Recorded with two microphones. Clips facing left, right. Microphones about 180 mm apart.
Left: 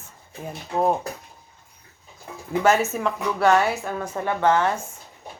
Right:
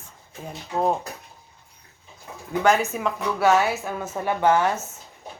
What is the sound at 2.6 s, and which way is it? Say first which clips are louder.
A woman's voice: left 1 dB; centre (ahead or behind).